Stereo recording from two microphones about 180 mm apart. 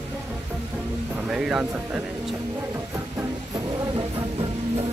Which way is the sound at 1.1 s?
5° right (ahead or behind).